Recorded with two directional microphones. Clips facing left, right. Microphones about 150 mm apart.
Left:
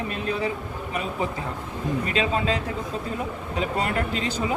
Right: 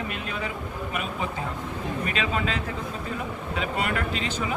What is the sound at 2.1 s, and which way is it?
Speech, 30° left (ahead or behind).